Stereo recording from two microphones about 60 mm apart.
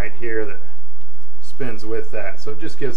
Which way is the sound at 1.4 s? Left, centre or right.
Centre.